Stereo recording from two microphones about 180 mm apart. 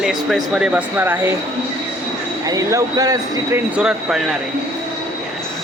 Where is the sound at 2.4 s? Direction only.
20° right (ahead or behind).